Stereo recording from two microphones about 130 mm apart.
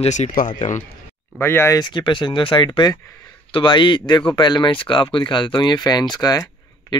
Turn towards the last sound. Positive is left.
turn(degrees=30)  # may be behind; listen again after turning